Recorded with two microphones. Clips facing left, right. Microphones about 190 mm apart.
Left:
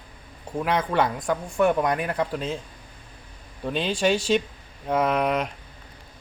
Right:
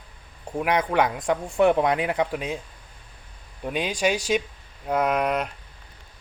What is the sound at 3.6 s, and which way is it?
Speech, 10° right (ahead or behind).